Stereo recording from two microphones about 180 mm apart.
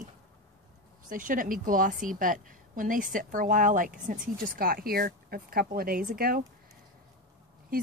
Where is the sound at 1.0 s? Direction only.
50° right (ahead or behind).